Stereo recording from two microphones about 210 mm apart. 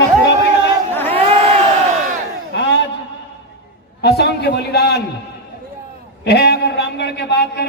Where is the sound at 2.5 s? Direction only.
55° left (ahead or behind).